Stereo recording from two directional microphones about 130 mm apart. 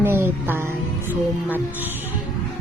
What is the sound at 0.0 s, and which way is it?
Music, 15° right (ahead or behind).